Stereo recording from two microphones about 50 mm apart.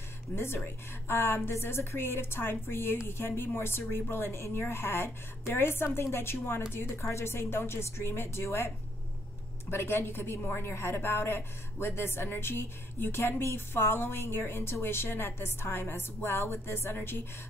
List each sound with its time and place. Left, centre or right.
0.3 s speech: left
1.0 s a woman's voice: left
1.5 s a woman's voice: left